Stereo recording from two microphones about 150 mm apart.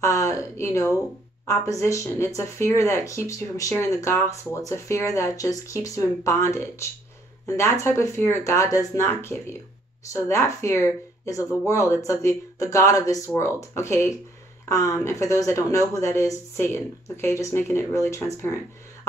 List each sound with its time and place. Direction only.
0.0 s speech: 20° left (ahead or behind)